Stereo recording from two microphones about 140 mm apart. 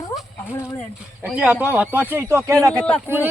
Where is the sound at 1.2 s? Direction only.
10° right (ahead or behind).